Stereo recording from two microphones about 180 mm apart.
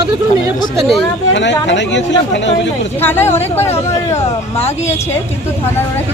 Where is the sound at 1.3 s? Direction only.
80° left.